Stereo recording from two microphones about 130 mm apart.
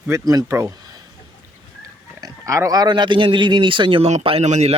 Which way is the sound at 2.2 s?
25° right (ahead or behind).